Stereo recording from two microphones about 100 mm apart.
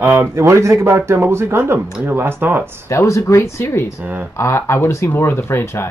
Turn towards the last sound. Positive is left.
turn(degrees=25)  # may be behind; listen again after turning